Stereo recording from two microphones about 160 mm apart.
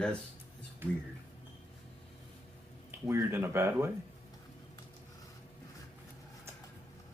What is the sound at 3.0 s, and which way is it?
Speech, 15° right (ahead or behind).